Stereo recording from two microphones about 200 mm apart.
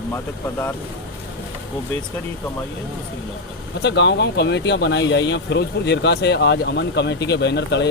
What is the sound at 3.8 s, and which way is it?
Speech, 60° left (ahead or behind).